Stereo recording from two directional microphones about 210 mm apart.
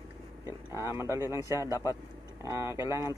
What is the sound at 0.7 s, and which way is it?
Speech, 10° right (ahead or behind).